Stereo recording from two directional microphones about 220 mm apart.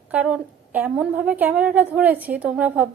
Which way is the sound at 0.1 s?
5° right (ahead or behind).